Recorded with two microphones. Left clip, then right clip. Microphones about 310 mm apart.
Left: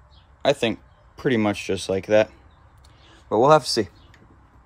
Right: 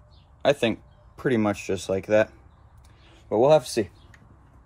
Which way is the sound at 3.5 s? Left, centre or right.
Left.